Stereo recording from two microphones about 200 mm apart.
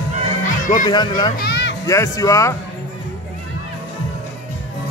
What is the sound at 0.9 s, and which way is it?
Speech, 20° left (ahead or behind).